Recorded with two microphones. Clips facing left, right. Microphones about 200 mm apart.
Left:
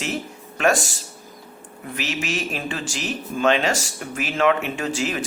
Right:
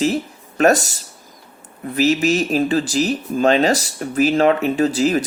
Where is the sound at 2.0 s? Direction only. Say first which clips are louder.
Right 11 dB; 40° right (ahead or behind).